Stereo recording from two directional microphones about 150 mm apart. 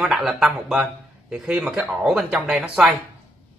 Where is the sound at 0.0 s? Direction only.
Centre (ahead or behind).